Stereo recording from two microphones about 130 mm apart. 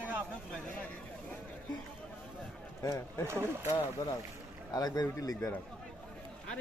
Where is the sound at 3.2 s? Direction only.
20° right (ahead or behind).